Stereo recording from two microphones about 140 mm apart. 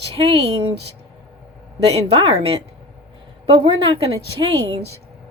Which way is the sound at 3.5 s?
40° right (ahead or behind).